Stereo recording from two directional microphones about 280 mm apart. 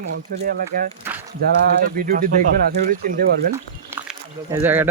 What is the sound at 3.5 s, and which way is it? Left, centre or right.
Speech, centre.